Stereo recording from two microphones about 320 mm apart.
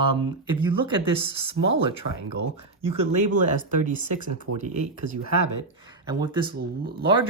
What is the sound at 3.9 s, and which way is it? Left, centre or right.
Speech, right.